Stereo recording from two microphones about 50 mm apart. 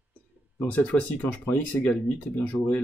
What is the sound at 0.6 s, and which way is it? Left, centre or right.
Speech, left.